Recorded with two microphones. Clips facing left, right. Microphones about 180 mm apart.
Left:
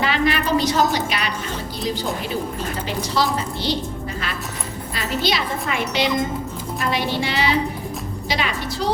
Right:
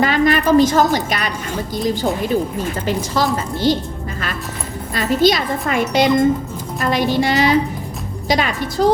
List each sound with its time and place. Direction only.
0.0 s a sound: 45° right (ahead or behind)
0.9 s a woman's voice: 45° right (ahead or behind)
2.8 s a woman's voice: 45° right (ahead or behind)
4.9 s a woman's voice: 45° right (ahead or behind)